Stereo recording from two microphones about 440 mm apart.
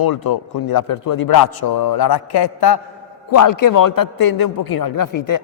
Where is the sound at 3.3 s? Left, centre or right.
Left.